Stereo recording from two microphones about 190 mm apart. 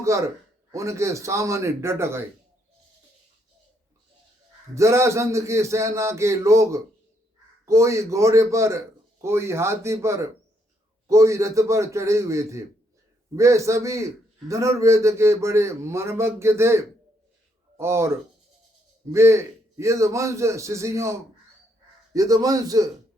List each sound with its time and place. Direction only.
0.0 s a man's voice: 15° right (ahead or behind)
4.7 s a man's voice: 15° right (ahead or behind)